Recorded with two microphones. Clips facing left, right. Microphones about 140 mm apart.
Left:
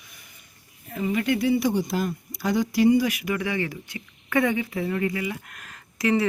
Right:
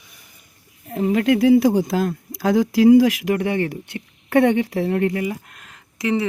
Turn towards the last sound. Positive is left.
turn(degrees=-20)  # may be behind; listen again after turning